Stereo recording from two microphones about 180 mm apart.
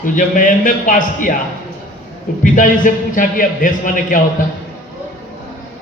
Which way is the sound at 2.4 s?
45° left (ahead or behind).